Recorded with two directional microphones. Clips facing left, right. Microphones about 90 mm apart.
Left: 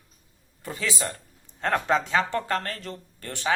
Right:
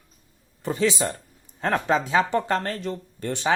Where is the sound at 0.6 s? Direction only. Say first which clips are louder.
Right 7 dB; 25° right (ahead or behind).